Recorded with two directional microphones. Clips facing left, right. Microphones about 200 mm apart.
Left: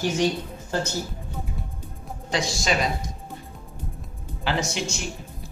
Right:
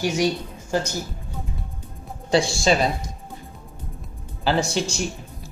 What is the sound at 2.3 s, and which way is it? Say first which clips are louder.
Speech: right 6 dB; 30° right (ahead or behind).